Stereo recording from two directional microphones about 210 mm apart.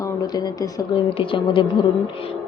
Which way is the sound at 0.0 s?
15° left (ahead or behind).